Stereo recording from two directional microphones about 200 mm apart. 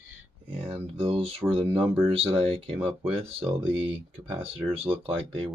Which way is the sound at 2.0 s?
30° right (ahead or behind).